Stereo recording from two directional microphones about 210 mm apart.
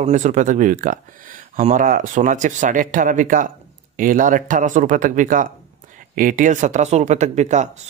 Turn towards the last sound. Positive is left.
turn(degrees=-35)  # may be behind; listen again after turning